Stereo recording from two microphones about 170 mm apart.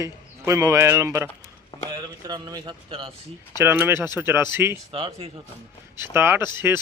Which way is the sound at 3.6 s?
15° right (ahead or behind).